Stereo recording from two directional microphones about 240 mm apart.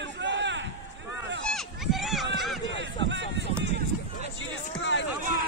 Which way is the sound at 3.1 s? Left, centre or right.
Right.